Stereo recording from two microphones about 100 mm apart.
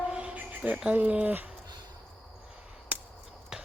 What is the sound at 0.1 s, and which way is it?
Cricket, 10° right (ahead or behind).